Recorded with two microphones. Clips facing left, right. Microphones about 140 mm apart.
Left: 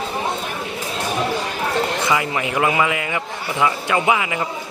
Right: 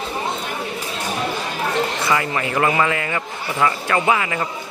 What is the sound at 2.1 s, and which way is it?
A man's voice, 15° left (ahead or behind).